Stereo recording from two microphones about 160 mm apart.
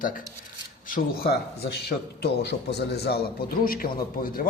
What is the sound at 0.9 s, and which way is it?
A man's voice, 70° left (ahead or behind).